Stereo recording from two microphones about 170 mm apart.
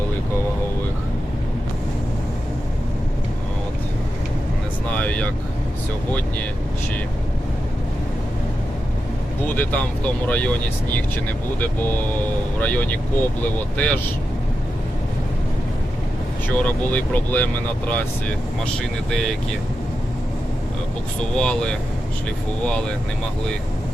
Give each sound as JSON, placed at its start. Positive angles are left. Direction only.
{"t": 4.9, "sound": "vehicle", "side_deg": 5}
{"t": 9.5, "sound": "speech", "side_deg": 10}
{"t": 12.5, "sound": "speech", "side_deg": 10}
{"t": 16.5, "sound": "speech", "side_deg": 10}
{"t": 21.3, "sound": "speech", "side_deg": 5}